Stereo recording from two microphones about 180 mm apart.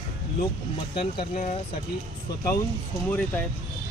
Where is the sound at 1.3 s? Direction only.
40° left (ahead or behind).